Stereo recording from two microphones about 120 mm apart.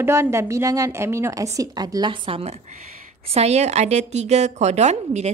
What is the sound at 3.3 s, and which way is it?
A woman's voice, 65° right (ahead or behind).